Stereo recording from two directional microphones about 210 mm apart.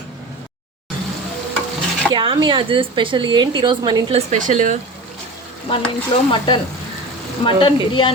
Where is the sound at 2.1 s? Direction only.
20° right (ahead or behind).